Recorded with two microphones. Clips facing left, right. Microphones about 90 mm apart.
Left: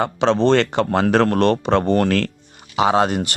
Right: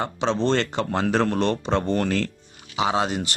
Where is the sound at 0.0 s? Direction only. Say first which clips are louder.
Left 6 dB; 70° left (ahead or behind).